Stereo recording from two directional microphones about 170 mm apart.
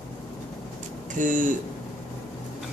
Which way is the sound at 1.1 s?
50° right (ahead or behind).